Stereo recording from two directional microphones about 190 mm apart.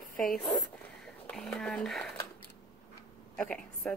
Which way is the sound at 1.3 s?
Centre (ahead or behind).